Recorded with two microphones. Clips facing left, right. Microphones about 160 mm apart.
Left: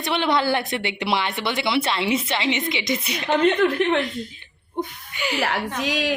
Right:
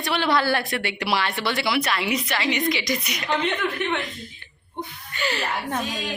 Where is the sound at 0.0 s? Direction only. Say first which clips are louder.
Left 1 dB; 20° left (ahead or behind).